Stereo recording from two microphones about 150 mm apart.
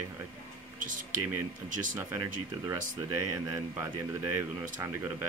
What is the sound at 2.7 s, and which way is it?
Speech, 20° right (ahead or behind).